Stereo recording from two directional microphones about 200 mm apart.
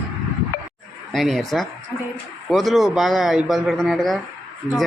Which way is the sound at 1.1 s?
Centre (ahead or behind).